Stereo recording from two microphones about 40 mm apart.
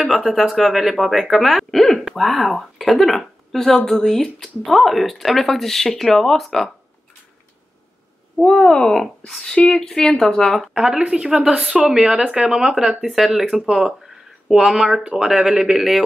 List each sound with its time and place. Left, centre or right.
0.0 s speech: centre
8.4 s speech: centre
10.8 s speech: centre
11.1 s speech: centre
13.7 s a sound: centre
14.7 s speech: centre